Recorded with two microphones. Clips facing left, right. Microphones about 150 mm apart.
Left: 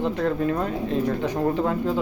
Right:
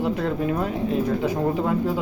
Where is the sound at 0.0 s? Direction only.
10° right (ahead or behind).